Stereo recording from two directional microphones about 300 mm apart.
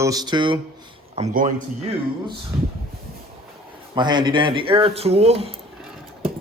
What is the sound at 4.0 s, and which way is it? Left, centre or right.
Speech, centre.